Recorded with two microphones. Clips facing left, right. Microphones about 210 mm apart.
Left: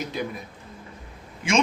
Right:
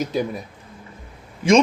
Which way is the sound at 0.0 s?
45° right (ahead or behind).